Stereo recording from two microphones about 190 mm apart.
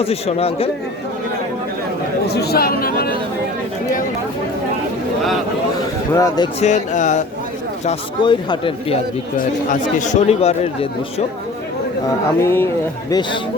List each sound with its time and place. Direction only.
0.0 s speech: 30° left (ahead or behind)
2.2 s speech: 60° left (ahead or behind)
6.1 s a man's voice: 20° left (ahead or behind)
6.6 s speech: 40° left (ahead or behind)
8.2 s a man's voice: 25° left (ahead or behind)
10.0 s speech: 40° left (ahead or behind)
12.4 s speech: 15° left (ahead or behind)